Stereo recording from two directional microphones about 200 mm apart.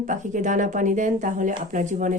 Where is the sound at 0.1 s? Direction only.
40° right (ahead or behind).